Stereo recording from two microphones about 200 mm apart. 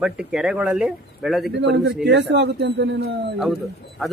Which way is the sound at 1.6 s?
60° right (ahead or behind).